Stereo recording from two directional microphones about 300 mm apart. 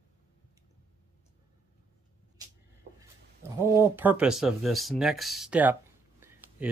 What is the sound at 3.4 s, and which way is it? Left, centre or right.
Speech, centre.